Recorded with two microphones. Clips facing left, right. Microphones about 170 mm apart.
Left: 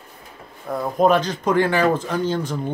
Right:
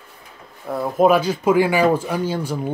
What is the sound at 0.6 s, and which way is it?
Speech, 5° right (ahead or behind).